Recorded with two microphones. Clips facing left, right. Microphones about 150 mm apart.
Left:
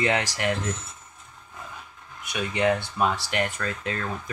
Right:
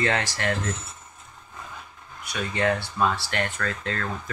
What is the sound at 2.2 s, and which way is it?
Speech, 20° left (ahead or behind).